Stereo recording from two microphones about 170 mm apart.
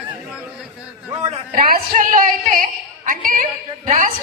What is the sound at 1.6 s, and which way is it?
A woman's voice, 60° right (ahead or behind).